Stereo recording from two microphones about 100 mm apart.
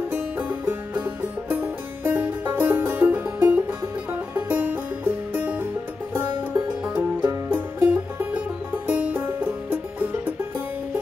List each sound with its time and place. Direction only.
0.1 s music: 15° right (ahead or behind)
6.8 s music: 15° right (ahead or behind)
7.9 s music: 10° right (ahead or behind)